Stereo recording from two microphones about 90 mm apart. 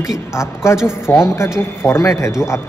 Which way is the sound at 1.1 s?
20° left (ahead or behind).